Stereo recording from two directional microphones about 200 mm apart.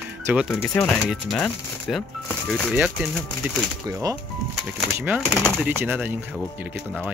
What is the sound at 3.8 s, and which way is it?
Speech, 15° right (ahead or behind).